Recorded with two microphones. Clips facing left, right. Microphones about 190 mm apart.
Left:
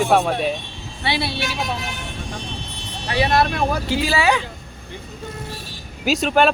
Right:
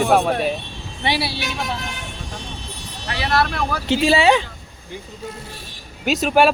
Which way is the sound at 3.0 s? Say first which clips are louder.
Left 3 dB; 25° left (ahead or behind).